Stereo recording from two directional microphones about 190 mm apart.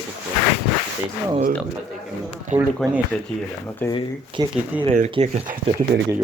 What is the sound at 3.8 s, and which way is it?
Speech, 10° left (ahead or behind).